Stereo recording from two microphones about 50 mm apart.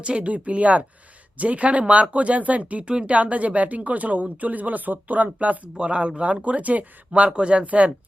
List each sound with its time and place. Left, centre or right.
0.0 s speech: right